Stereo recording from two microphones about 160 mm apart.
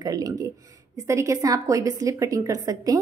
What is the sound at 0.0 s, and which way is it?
A woman's voice, 25° right (ahead or behind).